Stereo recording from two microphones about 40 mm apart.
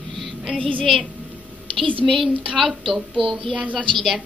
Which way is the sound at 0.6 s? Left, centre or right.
Left.